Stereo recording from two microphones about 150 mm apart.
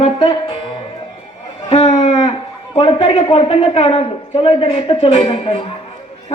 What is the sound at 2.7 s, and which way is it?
Speech, 35° left (ahead or behind).